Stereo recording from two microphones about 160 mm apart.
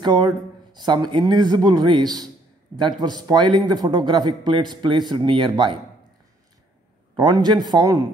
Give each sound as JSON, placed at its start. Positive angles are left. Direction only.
{"t": 0.0, "sound": "speech", "side_deg": -30}
{"t": 7.2, "sound": "speech", "side_deg": -25}